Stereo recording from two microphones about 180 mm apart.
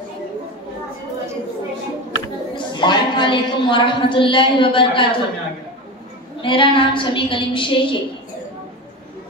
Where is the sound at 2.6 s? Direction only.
25° left (ahead or behind).